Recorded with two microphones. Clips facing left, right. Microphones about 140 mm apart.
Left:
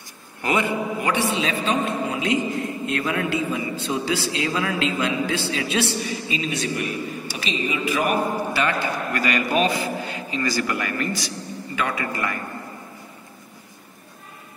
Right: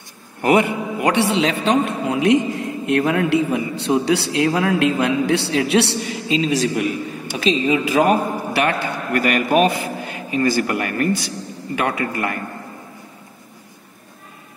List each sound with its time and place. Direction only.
0.4 s a man's voice: 65° right (ahead or behind)
2.9 s a man's voice: 60° right (ahead or behind)